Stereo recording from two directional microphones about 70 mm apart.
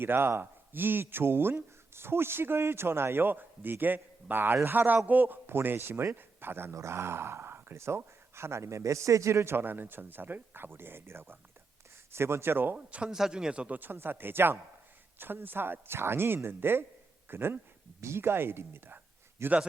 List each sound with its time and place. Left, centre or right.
0.0 s speech: right
12.7 s speech: centre
13.7 s speech: right